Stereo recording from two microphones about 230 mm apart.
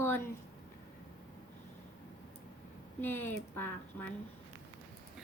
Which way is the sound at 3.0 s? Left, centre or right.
Centre.